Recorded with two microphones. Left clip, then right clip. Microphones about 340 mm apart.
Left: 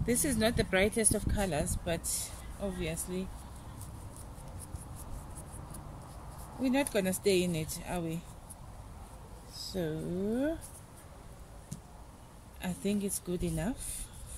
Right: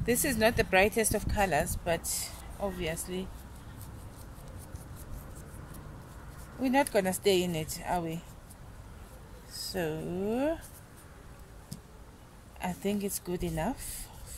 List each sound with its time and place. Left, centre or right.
0.0 s speech: centre
0.9 s speech: right
1.2 s speech: centre
6.6 s speech: centre
9.5 s a sound: right
9.8 s speech: right
12.5 s speech: centre